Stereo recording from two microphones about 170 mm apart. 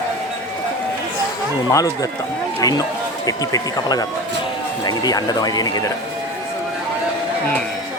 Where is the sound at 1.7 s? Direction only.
20° left (ahead or behind).